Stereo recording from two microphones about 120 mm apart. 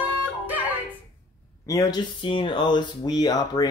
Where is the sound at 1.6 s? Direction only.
30° left (ahead or behind).